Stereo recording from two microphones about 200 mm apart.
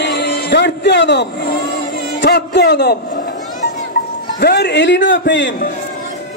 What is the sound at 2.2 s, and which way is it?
Speech, 55° left (ahead or behind).